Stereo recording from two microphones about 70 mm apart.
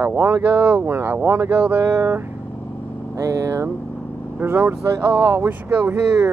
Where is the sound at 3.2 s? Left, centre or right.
Right.